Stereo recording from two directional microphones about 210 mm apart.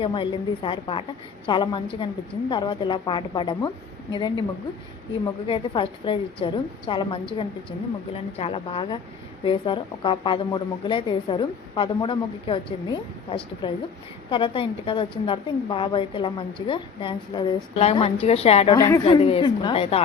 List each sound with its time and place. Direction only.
0.0 s a woman's voice: 25° left (ahead or behind)
5.5 s a woman's voice: 25° left (ahead or behind)
18.8 s a woman's voice: 15° left (ahead or behind)
19.0 s a woman's voice: 25° left (ahead or behind)